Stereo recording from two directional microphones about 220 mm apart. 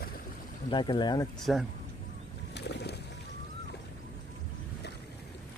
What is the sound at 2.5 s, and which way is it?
Bird, 50° left (ahead or behind).